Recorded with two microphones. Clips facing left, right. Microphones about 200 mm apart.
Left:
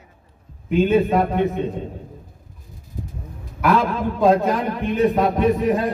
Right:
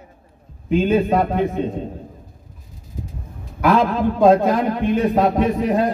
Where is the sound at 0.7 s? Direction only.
Centre (ahead or behind).